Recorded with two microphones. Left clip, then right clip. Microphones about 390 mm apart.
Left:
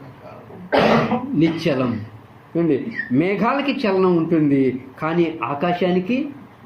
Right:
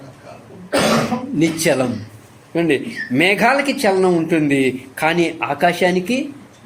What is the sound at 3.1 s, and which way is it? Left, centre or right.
Speech, right.